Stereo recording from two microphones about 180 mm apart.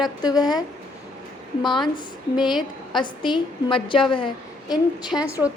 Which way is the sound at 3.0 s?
25° left (ahead or behind).